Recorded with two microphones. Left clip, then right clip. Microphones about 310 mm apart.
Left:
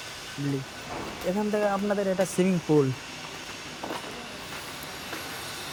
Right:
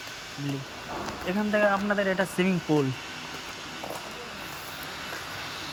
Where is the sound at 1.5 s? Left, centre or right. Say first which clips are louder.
Right 4 dB; centre.